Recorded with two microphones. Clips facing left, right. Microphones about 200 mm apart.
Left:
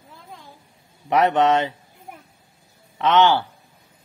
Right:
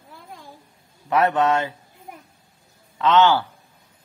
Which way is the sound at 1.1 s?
20° left (ahead or behind).